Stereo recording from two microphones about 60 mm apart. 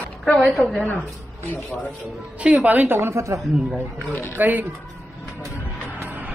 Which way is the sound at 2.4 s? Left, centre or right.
Right.